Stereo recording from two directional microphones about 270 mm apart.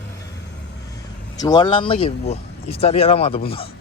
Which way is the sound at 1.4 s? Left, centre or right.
Centre.